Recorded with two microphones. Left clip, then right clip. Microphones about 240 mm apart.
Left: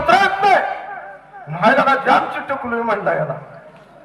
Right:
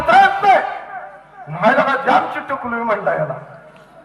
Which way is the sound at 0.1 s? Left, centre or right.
Left.